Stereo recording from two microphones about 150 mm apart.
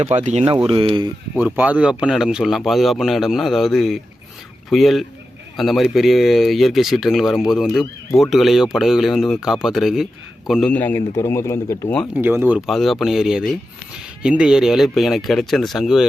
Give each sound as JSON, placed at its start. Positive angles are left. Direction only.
{"t": 0.0, "sound": "speech", "side_deg": -50}
{"t": 1.4, "sound": "speech", "side_deg": -10}
{"t": 10.7, "sound": "speech", "side_deg": 10}
{"t": 12.1, "sound": "speech", "side_deg": -15}